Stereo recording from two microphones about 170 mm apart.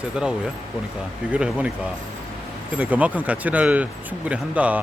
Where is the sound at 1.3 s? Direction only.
10° right (ahead or behind).